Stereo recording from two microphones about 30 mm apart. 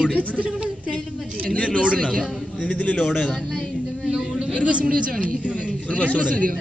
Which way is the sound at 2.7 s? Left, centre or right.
Left.